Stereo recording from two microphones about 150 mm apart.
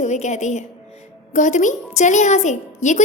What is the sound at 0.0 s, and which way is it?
A woman's voice, 50° left (ahead or behind).